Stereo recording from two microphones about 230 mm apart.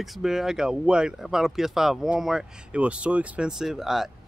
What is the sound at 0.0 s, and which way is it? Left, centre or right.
A man's voice, centre.